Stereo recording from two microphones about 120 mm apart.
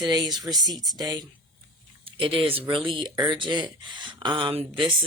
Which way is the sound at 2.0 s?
50° right (ahead or behind).